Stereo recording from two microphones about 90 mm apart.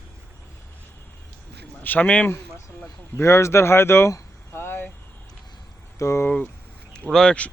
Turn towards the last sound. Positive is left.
turn(degrees=10)  # may be behind; listen again after turning